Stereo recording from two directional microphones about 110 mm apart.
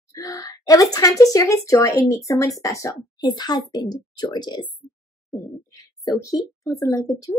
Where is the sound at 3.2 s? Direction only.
40° left (ahead or behind).